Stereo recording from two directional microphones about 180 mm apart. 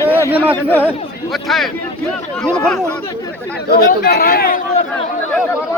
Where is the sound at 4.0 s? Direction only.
60° left (ahead or behind).